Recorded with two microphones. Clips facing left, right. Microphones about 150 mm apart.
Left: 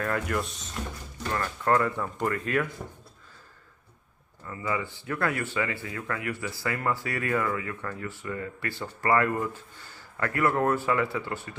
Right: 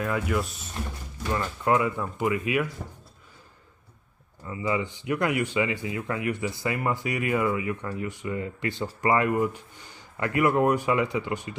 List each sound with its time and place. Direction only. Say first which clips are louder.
0.0 s speech: right 2 dB; 5° right (ahead or behind)
4.5 s speech: right 3 dB; 15° right (ahead or behind)